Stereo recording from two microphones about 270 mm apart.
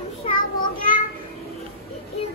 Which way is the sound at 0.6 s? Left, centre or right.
Left.